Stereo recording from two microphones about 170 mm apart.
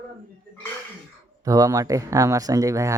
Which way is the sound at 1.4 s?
20° right (ahead or behind).